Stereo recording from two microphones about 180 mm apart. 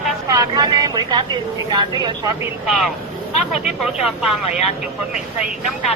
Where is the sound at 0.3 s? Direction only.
20° right (ahead or behind).